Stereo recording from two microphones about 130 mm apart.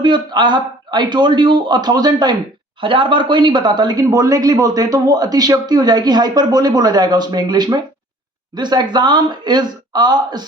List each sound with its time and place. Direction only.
0.0 s speech: 35° right (ahead or behind)